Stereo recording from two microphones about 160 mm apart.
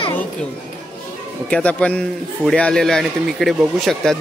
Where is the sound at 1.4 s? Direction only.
10° left (ahead or behind).